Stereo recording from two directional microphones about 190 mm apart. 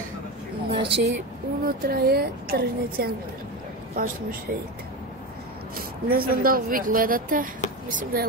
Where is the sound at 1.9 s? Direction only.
55° right (ahead or behind).